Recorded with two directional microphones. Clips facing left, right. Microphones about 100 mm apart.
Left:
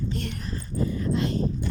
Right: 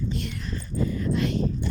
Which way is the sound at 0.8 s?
30° left (ahead or behind).